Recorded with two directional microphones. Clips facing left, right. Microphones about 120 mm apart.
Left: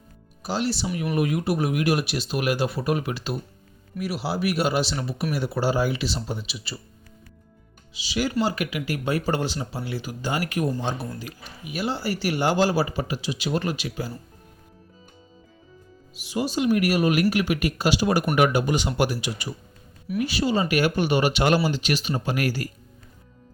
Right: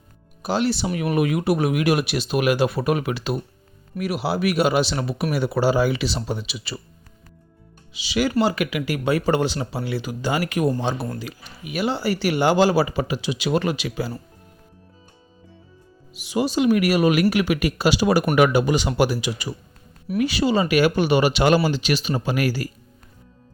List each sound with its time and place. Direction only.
0.4 s speech: 60° right (ahead or behind)
1.1 s speech: 80° right
7.9 s speech: 75° right (ahead or behind); by 14.1 s 90° right
16.2 s speech: 75° right (ahead or behind)